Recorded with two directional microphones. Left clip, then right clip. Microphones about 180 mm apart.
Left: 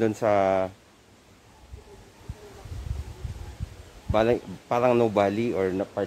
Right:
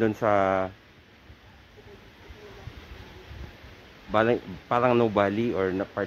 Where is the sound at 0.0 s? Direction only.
20° right (ahead or behind).